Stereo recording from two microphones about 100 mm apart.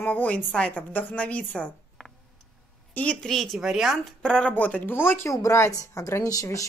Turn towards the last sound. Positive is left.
turn(degrees=35)  # may be behind; listen again after turning